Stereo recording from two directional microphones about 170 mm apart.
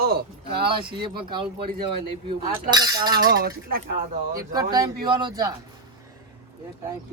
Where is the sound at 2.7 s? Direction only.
25° right (ahead or behind).